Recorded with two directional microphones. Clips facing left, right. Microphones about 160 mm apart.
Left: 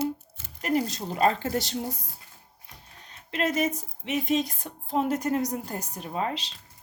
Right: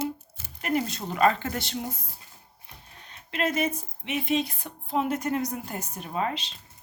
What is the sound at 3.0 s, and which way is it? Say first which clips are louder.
Speech: even; 40° left (ahead or behind).